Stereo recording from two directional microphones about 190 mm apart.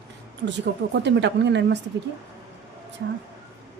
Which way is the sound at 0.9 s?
65° right (ahead or behind).